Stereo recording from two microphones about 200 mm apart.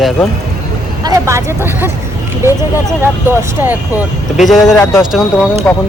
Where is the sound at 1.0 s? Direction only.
15° right (ahead or behind); by 5.8 s 10° left (ahead or behind).